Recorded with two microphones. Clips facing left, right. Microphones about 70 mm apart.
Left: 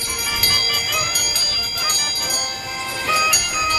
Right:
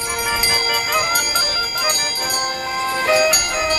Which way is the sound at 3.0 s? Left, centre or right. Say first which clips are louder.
Right 3 dB; right.